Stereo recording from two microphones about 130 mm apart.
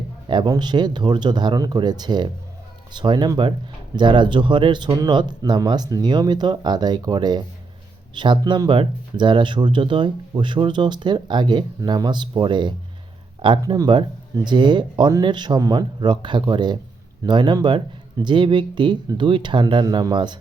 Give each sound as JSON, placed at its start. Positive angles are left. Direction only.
{"t": 0.3, "sound": "speech", "side_deg": -35}